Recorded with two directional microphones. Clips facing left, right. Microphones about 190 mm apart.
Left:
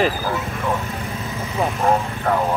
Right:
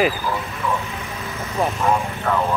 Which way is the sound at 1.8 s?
35° left (ahead or behind).